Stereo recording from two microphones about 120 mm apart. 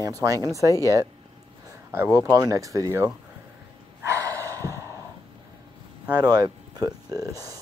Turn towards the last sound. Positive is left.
turn(degrees=-30)  # may be behind; listen again after turning